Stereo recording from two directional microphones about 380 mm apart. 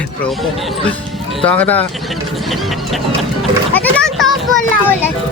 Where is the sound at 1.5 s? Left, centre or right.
Centre.